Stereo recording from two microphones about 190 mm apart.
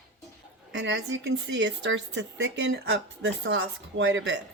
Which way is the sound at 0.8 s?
70° right (ahead or behind).